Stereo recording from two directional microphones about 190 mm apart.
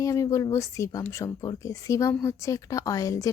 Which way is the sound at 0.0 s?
15° left (ahead or behind).